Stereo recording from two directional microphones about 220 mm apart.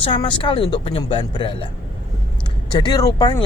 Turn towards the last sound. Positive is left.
turn(degrees=20)  # may be behind; listen again after turning